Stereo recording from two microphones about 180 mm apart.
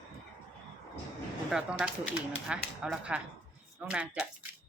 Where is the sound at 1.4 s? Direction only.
5° right (ahead or behind).